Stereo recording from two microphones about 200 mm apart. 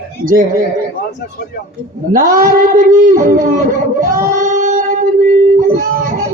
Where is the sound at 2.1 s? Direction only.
45° right (ahead or behind).